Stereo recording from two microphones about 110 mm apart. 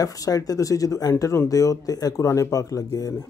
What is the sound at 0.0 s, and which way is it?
Speech, 35° left (ahead or behind).